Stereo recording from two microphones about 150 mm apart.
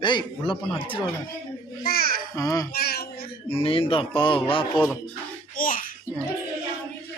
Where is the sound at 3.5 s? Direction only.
40° left (ahead or behind).